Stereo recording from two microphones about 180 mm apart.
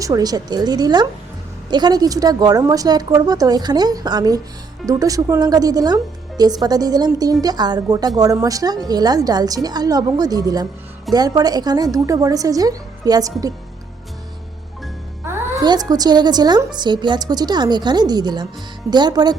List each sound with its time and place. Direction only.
0.0 s a woman's voice: 20° right (ahead or behind)
15.4 s a woman's voice: 20° right (ahead or behind)